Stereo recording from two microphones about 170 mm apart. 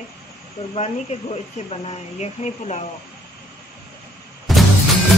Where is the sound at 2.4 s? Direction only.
35° left (ahead or behind).